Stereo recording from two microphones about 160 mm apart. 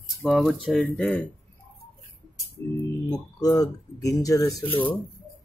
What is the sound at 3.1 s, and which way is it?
Speech, 25° left (ahead or behind).